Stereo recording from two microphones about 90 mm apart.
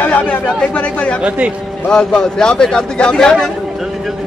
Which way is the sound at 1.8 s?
10° left (ahead or behind).